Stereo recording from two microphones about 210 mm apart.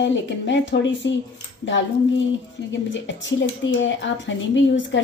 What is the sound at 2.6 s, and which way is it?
Speech, 60° left (ahead or behind).